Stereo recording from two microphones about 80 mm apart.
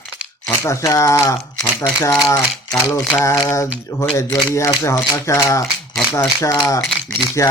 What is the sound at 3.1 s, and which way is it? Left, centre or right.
Speech, left.